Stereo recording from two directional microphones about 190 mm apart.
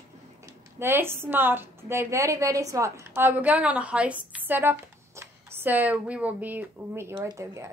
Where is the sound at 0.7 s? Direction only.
10° right (ahead or behind).